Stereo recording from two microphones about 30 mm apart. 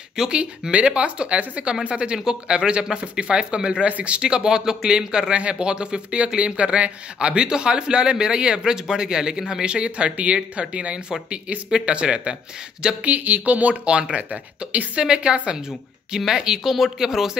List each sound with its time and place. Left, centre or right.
0.1 s speech: right
0.4 s speech: right
13.2 s speech: right
13.8 s speech: right
16.3 s speech: centre
16.6 s speech: centre